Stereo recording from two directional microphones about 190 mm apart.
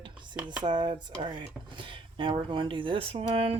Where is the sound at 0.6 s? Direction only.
25° right (ahead or behind).